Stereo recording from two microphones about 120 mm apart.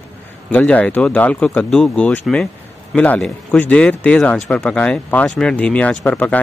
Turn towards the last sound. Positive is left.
turn(degrees=10)  # may be behind; listen again after turning